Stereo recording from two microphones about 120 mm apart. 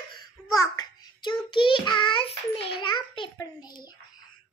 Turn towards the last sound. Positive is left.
turn(degrees=35)  # may be behind; listen again after turning